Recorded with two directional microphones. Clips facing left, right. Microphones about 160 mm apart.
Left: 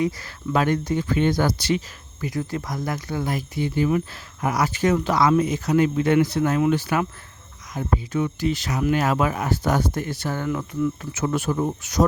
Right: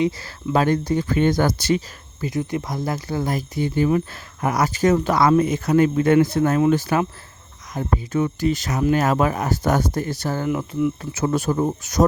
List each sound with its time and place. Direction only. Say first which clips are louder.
0.0 s speech: right 3 dB; 30° right (ahead or behind)
2.2 s speech: right 3 dB; 20° right (ahead or behind); by 10.5 s 35° right (ahead or behind)
10.5 s speech: right 2 dB; 20° right (ahead or behind)
11.1 s speech: right 3 dB; 35° right (ahead or behind)